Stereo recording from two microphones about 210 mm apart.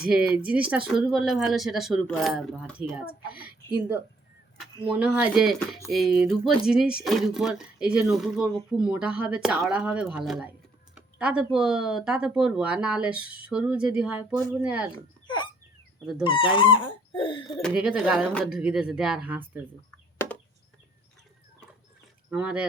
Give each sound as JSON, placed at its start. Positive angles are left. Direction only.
{"t": 0.1, "sound": "a woman's voice", "side_deg": -5}
{"t": 14.9, "sound": "speech", "side_deg": 20}
{"t": 17.6, "sound": "speech", "side_deg": -5}
{"t": 20.1, "sound": "a sound", "side_deg": 10}
{"t": 22.3, "sound": "speech", "side_deg": -5}